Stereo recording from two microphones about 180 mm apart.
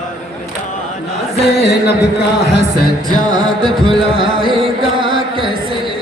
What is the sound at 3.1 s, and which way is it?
Music, 25° right (ahead or behind).